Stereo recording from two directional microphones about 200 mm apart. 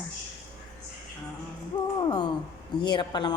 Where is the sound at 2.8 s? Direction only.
20° left (ahead or behind).